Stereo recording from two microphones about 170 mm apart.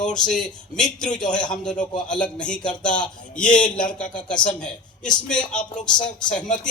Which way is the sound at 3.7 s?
50° left (ahead or behind).